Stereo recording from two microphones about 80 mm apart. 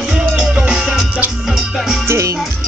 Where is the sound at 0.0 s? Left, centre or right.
Centre.